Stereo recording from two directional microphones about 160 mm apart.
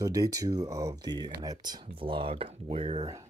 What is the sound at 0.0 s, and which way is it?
Speech, 20° right (ahead or behind).